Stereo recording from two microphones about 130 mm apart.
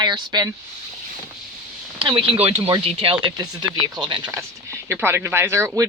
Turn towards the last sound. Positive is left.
turn(degrees=-20)  # may be behind; listen again after turning